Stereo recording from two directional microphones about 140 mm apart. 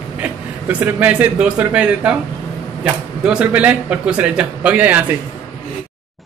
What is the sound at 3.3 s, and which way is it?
Speech, 10° right (ahead or behind).